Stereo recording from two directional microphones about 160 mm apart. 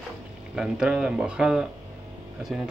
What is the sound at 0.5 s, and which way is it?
Speech, 5° right (ahead or behind).